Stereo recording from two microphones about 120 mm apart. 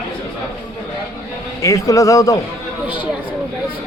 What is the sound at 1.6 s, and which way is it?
Speech, 30° left (ahead or behind).